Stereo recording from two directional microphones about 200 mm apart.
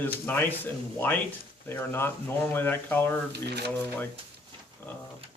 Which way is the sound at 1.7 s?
10° left (ahead or behind).